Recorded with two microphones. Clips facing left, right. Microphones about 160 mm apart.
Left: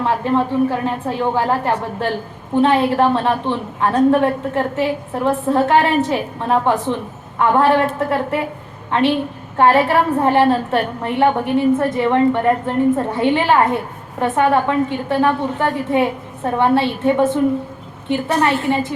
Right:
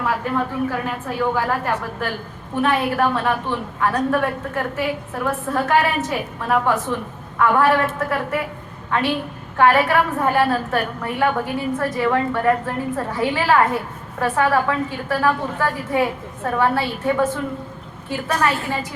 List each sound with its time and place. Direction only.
0.0 s a woman's voice: 25° left (ahead or behind)